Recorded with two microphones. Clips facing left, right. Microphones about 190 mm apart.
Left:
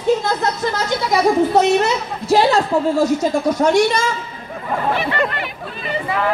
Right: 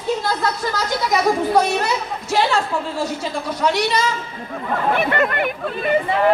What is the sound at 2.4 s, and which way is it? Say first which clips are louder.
A woman's voice: left 3 dB; 40° left (ahead or behind).